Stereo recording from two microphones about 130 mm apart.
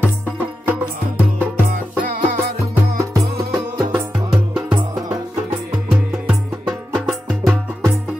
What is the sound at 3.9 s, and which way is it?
Music, 5° right (ahead or behind).